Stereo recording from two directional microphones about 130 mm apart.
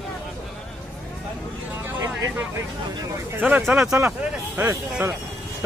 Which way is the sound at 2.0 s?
20° right (ahead or behind).